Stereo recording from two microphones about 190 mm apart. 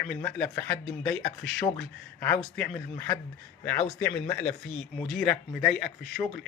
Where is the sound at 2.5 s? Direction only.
10° left (ahead or behind).